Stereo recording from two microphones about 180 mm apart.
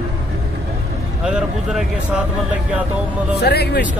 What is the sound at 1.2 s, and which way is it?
Speech, 5° right (ahead or behind).